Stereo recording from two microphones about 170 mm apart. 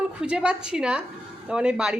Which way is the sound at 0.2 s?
5° right (ahead or behind).